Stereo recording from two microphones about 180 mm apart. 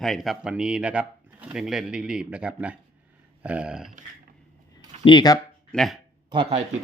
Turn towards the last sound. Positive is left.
turn(degrees=-30)  # may be behind; listen again after turning